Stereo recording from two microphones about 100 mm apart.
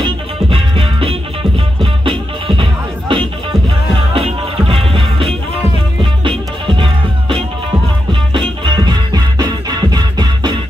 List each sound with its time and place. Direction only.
0.0 s music: 60° right (ahead or behind)